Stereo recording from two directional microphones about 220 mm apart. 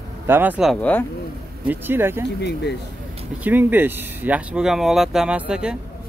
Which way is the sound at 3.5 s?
10° right (ahead or behind).